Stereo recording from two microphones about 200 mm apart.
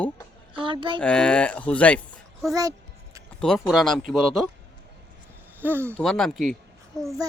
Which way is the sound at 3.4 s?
Centre (ahead or behind).